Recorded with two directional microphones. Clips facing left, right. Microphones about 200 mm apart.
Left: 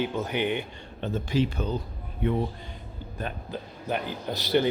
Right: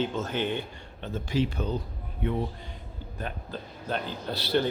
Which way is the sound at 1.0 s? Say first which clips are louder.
Left 2 dB; 60° left (ahead or behind).